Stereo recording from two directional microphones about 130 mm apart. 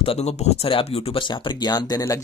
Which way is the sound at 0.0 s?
50° left (ahead or behind).